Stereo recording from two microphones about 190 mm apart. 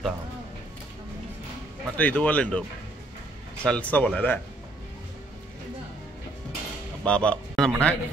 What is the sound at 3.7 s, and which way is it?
Speech, 5° left (ahead or behind).